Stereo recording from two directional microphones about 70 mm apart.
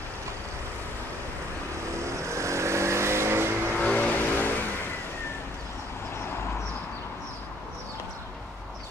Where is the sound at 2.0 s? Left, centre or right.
Right.